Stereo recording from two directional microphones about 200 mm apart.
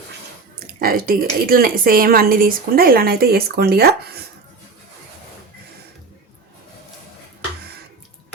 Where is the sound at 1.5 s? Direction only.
45° right (ahead or behind).